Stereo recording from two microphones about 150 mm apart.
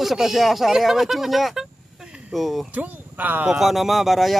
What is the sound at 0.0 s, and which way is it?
Speech, centre (ahead or behind).